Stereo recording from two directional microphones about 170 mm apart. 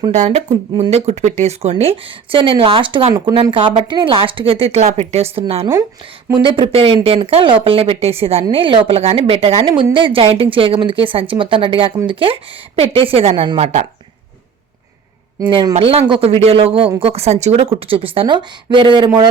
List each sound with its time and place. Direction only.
0.1 s speech: 40° right (ahead or behind)
13.6 s speech: 40° right (ahead or behind)
15.4 s speech: 25° right (ahead or behind)